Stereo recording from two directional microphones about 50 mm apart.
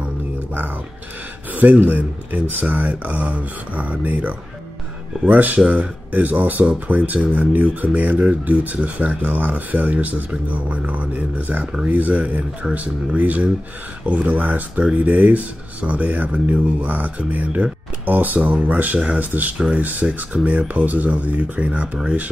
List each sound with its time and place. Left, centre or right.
1.5 s speech: right